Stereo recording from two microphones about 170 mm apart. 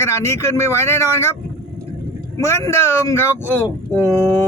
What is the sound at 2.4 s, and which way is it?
Speech, 15° left (ahead or behind).